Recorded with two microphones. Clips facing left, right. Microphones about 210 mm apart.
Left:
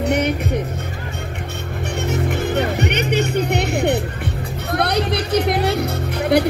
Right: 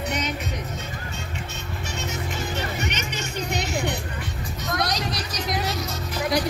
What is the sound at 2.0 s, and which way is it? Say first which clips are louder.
Music: left 10 dB; 60° left (ahead or behind).